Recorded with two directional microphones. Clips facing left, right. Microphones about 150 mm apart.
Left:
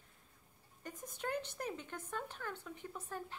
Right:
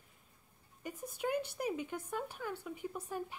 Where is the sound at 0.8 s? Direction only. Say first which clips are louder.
Right 5 dB; 10° right (ahead or behind).